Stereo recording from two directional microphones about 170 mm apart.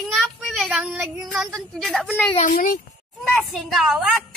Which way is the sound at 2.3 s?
45° left (ahead or behind).